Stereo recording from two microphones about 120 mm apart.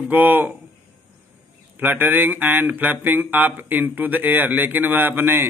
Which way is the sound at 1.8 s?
15° right (ahead or behind).